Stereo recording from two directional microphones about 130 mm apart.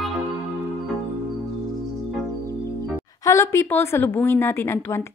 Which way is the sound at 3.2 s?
20° left (ahead or behind).